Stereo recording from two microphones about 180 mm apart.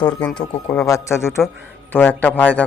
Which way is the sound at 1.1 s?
Centre (ahead or behind).